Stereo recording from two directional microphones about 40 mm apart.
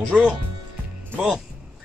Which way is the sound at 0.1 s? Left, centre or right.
Right.